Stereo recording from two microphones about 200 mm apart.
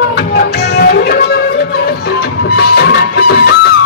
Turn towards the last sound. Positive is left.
turn(degrees=55)  # may be behind; listen again after turning